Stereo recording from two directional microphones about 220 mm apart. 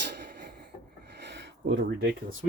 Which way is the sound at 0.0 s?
50° right (ahead or behind).